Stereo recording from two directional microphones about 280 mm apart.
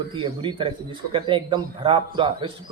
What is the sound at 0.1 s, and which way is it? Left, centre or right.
A man's voice, centre.